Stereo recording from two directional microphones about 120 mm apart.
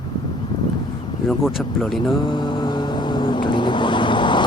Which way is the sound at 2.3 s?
40° left (ahead or behind).